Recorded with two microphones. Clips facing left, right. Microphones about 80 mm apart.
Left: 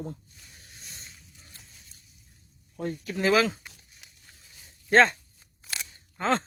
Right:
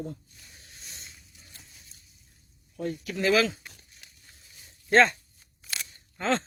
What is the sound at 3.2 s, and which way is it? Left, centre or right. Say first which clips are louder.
Speech: left 1 dB; left.